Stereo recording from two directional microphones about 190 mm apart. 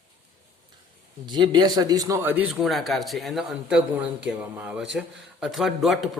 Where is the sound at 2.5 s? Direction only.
Centre (ahead or behind).